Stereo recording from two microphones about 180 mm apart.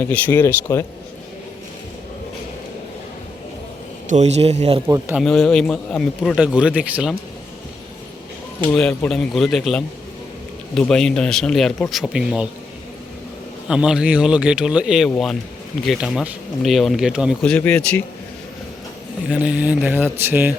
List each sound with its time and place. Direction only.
0.1 s speech: 10° left (ahead or behind)
4.1 s a man's voice: 35° right (ahead or behind)
4.9 s speech: 15° right (ahead or behind)
5.2 s speech: 5° left (ahead or behind)
8.6 s speech: 5° left (ahead or behind)
13.7 s speech: 5° right (ahead or behind)
19.3 s speech: 5° right (ahead or behind)